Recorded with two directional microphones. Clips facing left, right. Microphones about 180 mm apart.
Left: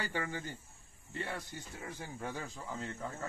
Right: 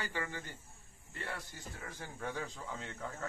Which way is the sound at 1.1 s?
20° left (ahead or behind).